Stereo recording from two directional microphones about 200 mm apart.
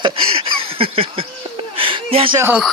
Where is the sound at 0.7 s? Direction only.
25° right (ahead or behind).